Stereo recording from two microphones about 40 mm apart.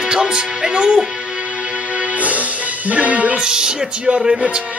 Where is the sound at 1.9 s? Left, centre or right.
Right.